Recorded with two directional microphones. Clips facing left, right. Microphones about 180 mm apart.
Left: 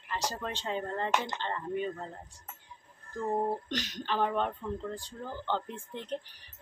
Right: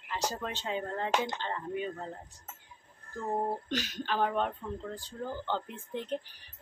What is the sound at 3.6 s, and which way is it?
Speech, 10° right (ahead or behind).